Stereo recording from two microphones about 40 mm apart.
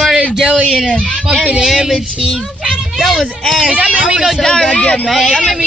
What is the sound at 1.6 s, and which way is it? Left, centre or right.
Speech, centre.